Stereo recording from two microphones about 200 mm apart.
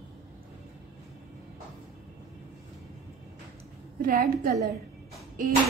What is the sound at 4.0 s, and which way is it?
Speech, 45° right (ahead or behind).